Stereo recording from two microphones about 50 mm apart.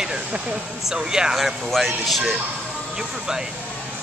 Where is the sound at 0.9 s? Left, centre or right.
Centre.